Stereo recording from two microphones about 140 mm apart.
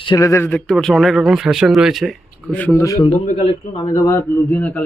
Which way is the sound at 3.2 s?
55° left (ahead or behind).